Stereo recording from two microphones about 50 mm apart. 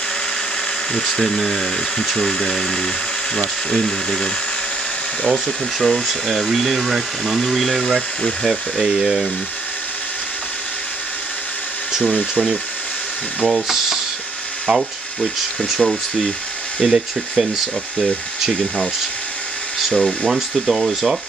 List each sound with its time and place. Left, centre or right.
0.9 s speech: centre
5.3 s speech: centre
12.0 s speech: left
13.5 s speech: centre
15.8 s speech: centre
19.9 s speech: centre
20.2 s speech: centre